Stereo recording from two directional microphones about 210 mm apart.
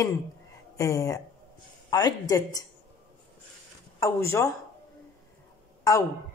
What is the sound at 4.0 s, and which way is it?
Speech, 15° left (ahead or behind).